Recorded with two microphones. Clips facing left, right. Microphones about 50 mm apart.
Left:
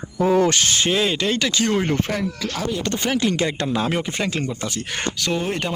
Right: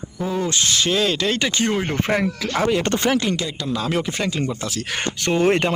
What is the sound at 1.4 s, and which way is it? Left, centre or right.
Speech, right.